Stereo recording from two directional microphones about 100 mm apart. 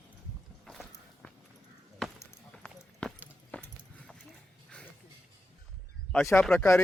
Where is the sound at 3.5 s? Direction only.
15° left (ahead or behind).